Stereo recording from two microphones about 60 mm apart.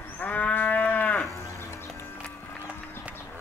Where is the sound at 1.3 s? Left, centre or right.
Left.